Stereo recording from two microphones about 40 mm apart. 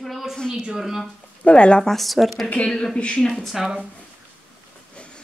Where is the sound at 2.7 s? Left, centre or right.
Left.